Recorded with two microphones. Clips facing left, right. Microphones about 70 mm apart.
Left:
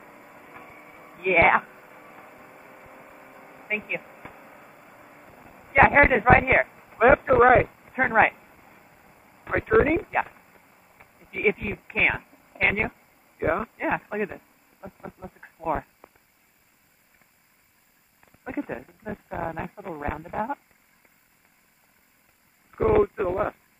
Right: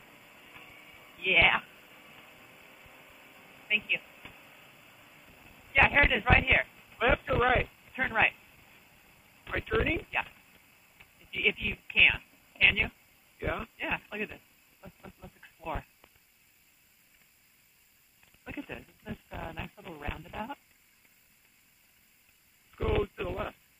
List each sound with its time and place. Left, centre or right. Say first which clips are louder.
0.0 s a sound: left 8 dB; left
18.2 s a woman's voice: left 10 dB; left
22.7 s speech: left 10 dB; left